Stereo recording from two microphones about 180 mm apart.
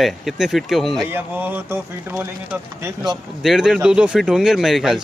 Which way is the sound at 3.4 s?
Centre (ahead or behind).